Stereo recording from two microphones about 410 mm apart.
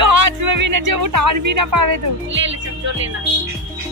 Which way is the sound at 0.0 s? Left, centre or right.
Right.